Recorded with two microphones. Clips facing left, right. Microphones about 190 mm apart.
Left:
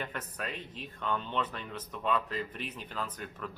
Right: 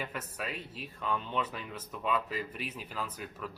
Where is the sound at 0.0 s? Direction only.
5° right (ahead or behind).